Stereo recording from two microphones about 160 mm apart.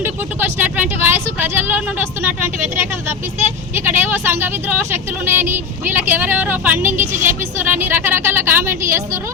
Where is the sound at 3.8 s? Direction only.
15° right (ahead or behind).